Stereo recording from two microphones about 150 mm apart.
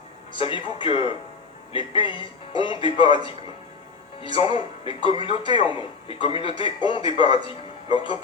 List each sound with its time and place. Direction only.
0.3 s a man's voice: 35° left (ahead or behind)